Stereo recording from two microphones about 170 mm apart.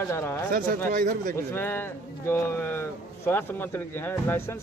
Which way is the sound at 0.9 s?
55° right (ahead or behind).